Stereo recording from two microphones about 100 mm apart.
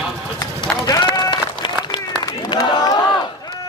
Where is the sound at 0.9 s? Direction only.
40° left (ahead or behind).